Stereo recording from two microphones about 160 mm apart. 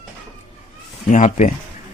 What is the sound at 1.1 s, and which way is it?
Speech, 50° left (ahead or behind).